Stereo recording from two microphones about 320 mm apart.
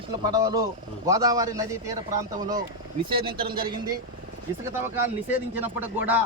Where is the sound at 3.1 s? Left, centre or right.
Centre.